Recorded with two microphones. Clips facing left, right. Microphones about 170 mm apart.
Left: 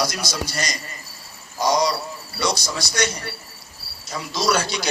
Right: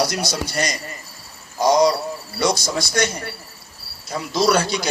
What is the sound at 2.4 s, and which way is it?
Speech, 55° right (ahead or behind).